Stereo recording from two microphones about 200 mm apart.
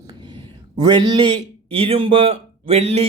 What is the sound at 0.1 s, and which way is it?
Speech, 20° right (ahead or behind).